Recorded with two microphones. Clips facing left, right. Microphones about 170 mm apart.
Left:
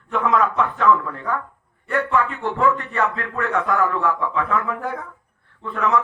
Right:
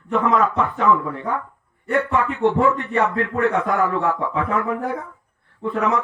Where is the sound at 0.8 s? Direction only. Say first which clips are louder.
Even; 20° right (ahead or behind).